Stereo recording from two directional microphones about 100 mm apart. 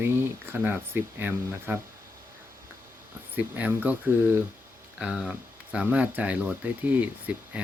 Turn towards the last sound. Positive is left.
turn(degrees=-10)  # may be behind; listen again after turning